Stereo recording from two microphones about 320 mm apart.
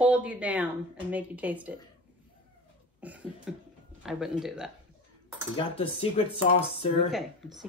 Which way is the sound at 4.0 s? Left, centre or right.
Centre.